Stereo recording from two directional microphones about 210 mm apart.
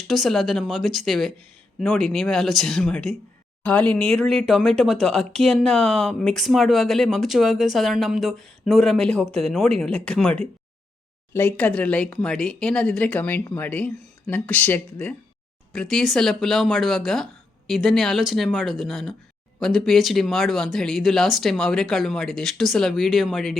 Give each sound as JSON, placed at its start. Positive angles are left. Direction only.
{"t": 0.1, "sound": "speech", "side_deg": 0}